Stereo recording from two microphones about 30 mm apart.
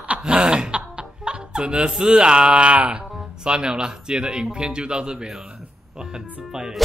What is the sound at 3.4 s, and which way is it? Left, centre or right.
Speech, right.